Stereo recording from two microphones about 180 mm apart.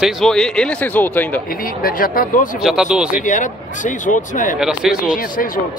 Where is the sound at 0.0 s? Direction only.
Centre (ahead or behind).